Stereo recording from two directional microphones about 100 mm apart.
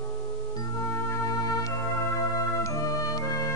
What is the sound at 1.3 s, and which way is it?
Music, 35° left (ahead or behind).